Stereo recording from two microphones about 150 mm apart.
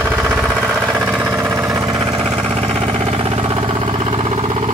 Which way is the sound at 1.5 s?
20° right (ahead or behind).